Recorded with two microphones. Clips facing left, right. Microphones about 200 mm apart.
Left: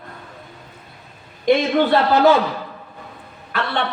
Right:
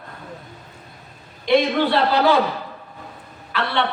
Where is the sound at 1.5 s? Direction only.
45° left (ahead or behind).